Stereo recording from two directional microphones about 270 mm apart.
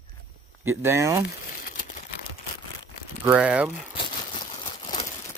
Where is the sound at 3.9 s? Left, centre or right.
Centre.